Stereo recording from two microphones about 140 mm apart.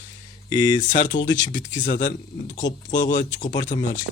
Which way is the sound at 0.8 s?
65° left (ahead or behind).